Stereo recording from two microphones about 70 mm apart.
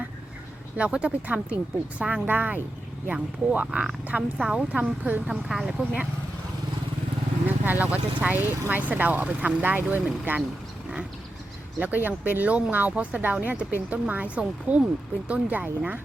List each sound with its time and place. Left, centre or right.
0.8 s speech: centre
3.7 s speech: centre
5.3 s speech: centre
7.4 s speech: right
11.8 s speech: right